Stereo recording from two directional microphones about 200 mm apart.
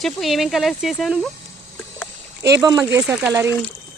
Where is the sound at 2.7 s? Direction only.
5° right (ahead or behind).